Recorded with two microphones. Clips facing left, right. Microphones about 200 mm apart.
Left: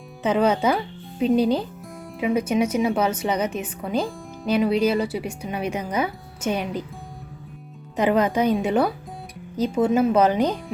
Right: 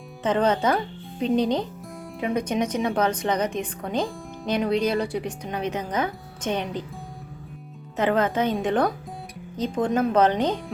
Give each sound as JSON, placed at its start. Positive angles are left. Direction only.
{"t": 0.2, "sound": "a woman's voice", "side_deg": 10}
{"t": 7.9, "sound": "a woman's voice", "side_deg": 15}